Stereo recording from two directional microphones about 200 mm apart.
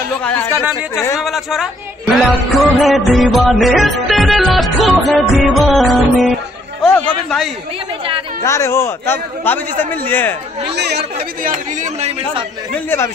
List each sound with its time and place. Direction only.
0.2 s speech: 10° left (ahead or behind)
1.2 s music: centre (ahead or behind)
6.8 s speech: 5° left (ahead or behind)
8.4 s speech: 15° left (ahead or behind)
10.7 s speech: 55° right (ahead or behind)
11.1 s speech: 35° right (ahead or behind)